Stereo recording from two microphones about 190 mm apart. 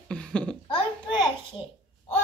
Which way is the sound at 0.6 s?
25° left (ahead or behind).